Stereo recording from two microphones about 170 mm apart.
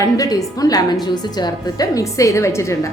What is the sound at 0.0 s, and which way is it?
A woman's voice, 20° left (ahead or behind).